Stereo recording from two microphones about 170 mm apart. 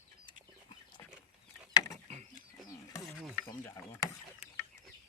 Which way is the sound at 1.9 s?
40° right (ahead or behind).